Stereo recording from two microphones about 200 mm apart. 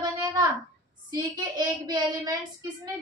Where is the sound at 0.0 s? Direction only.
20° right (ahead or behind).